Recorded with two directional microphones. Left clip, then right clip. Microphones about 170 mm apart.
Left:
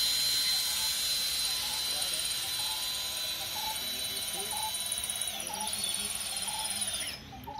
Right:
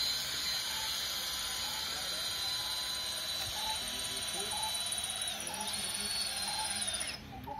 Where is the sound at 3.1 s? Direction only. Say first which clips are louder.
Left 2 dB; 20° left (ahead or behind).